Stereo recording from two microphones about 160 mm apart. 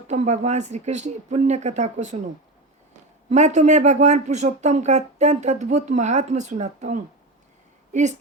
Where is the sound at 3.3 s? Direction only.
50° right (ahead or behind).